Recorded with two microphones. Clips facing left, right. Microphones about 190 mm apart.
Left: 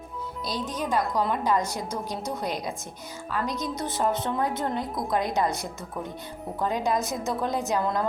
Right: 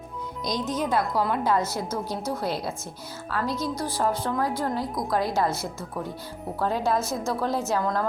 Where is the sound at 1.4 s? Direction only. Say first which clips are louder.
Right 1 dB; 15° left (ahead or behind).